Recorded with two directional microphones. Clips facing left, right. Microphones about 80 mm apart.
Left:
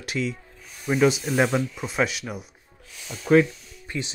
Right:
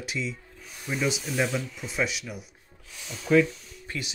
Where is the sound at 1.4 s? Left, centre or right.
Left.